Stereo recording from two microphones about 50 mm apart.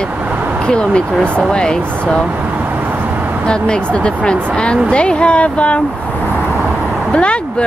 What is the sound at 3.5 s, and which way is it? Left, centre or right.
Speech, centre.